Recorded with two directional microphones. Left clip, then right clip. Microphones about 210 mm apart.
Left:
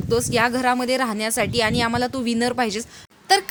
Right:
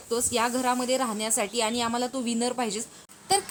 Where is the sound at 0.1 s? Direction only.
35° left (ahead or behind).